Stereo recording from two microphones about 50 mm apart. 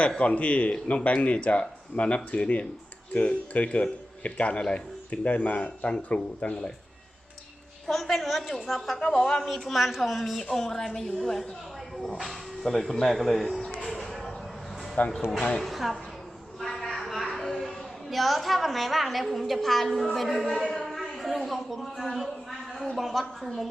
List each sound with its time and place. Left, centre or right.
0.2 s speech: left
7.9 s a woman's voice: centre
9.4 s a woman's voice: centre
12.1 s a woman's voice: centre
13.6 s a sound: centre
13.8 s music: centre
15.0 s speech: left
15.4 s speech: left
15.6 s a woman's voice: centre
16.6 s a sound: centre
19.5 s a woman's voice: centre